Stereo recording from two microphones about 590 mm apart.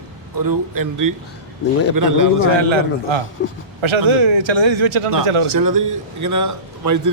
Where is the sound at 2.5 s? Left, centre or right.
Right.